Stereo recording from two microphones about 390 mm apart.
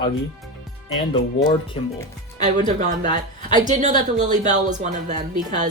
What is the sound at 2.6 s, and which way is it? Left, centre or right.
A woman's voice, centre.